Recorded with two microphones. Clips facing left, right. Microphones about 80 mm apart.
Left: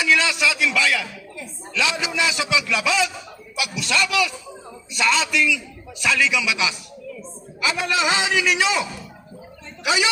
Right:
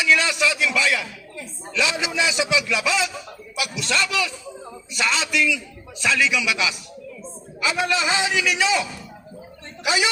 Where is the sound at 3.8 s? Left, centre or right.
Right.